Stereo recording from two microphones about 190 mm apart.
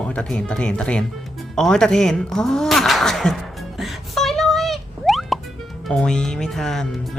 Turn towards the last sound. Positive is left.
turn(degrees=0)  # may be behind; listen again after turning